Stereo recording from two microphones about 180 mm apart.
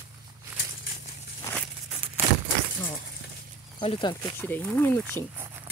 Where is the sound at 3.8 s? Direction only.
30° left (ahead or behind).